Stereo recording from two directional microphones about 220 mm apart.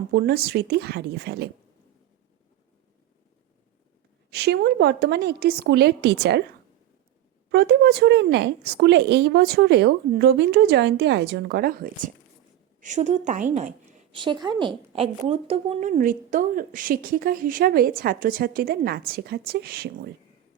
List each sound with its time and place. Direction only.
0.1 s a woman's voice: 45° right (ahead or behind)
4.3 s a woman's voice: 45° right (ahead or behind)
7.5 s a woman's voice: 50° right (ahead or behind); by 14.2 s 35° right (ahead or behind)
14.2 s a woman's voice: 20° right (ahead or behind); by 19.9 s 45° right (ahead or behind)